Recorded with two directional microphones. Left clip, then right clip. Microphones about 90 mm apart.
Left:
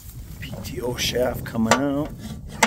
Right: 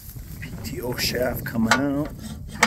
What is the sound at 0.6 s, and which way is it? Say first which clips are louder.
Speech: left 1 dB; 20° left (ahead or behind).